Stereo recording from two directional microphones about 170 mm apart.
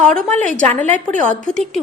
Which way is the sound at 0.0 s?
5° left (ahead or behind).